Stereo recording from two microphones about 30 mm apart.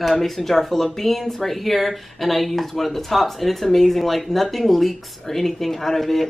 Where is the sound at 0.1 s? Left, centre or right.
Centre.